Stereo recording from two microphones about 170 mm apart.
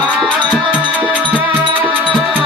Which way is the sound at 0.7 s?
10° right (ahead or behind).